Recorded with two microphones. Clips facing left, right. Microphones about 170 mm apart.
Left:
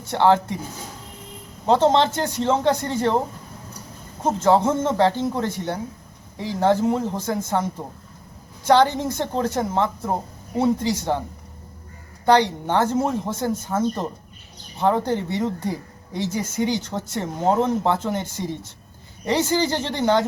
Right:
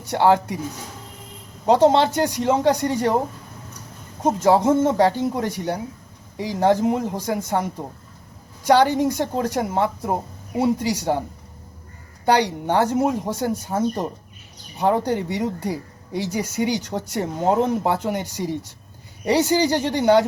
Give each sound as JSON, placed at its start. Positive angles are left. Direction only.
{"t": 0.0, "sound": "speech", "side_deg": -15}
{"t": 1.6, "sound": "speech", "side_deg": -15}
{"t": 4.2, "sound": "speech", "side_deg": -10}
{"t": 12.2, "sound": "speech", "side_deg": -15}